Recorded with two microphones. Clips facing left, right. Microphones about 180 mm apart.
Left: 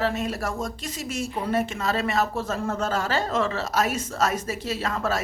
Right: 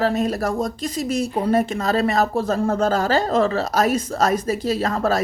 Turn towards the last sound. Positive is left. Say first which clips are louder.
# right 6 dB
turn(degrees=-40)  # may be behind; listen again after turning